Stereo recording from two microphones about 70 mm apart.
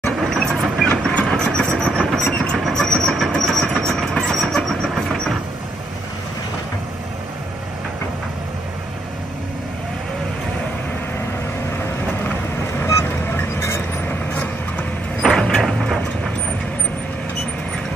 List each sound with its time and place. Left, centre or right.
0.0 s vehicle: centre
1.8 s train: centre
4.9 s vehicle: centre
14.0 s vehicle: left
15.2 s a sound: centre